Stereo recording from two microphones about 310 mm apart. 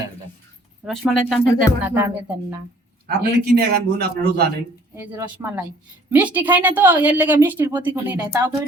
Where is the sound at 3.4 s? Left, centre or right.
Right.